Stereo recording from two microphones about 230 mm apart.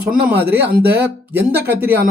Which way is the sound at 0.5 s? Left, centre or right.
Right.